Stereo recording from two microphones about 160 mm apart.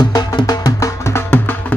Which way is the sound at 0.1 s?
25° left (ahead or behind).